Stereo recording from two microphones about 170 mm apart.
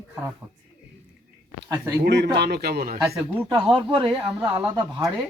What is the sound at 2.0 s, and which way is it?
Speech, 85° right.